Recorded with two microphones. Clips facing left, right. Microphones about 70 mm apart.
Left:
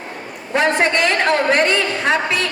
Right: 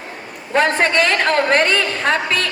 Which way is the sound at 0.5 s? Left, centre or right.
Right.